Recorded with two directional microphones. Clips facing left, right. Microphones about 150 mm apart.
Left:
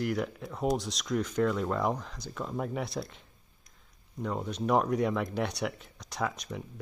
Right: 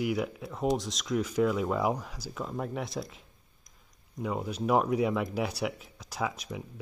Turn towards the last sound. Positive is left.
turn(degrees=-5)  # may be behind; listen again after turning